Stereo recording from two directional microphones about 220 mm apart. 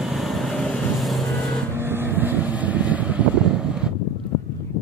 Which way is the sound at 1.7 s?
10° right (ahead or behind).